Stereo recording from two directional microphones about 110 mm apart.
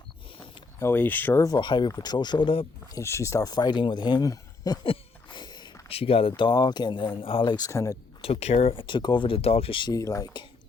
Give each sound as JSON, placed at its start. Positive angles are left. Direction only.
{"t": 0.8, "sound": "speech", "side_deg": 20}
{"t": 1.5, "sound": "speech", "side_deg": 45}
{"t": 2.9, "sound": "speech", "side_deg": 25}
{"t": 4.8, "sound": "a sound", "side_deg": 50}
{"t": 5.9, "sound": "speech", "side_deg": 60}
{"t": 7.5, "sound": "speech", "side_deg": 30}
{"t": 8.2, "sound": "speech", "side_deg": 70}
{"t": 9.9, "sound": "speech", "side_deg": 30}